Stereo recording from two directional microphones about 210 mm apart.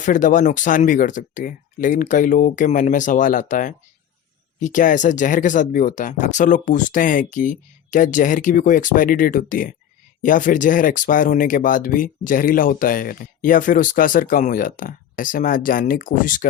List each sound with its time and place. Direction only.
0.0 s speech: 35° left (ahead or behind)